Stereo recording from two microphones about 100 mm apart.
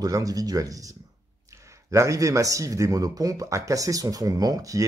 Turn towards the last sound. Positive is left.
turn(degrees=-35)  # may be behind; listen again after turning